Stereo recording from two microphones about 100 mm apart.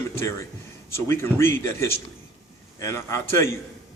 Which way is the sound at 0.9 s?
25° left (ahead or behind).